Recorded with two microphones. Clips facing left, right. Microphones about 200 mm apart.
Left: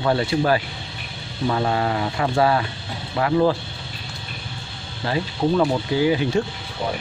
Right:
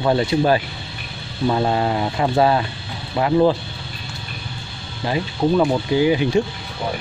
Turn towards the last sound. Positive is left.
turn(degrees=-20)  # may be behind; listen again after turning